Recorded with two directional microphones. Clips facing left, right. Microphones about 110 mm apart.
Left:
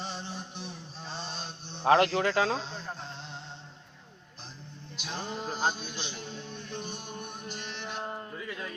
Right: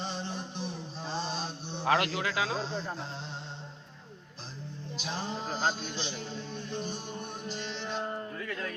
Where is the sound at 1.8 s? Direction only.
35° left (ahead or behind).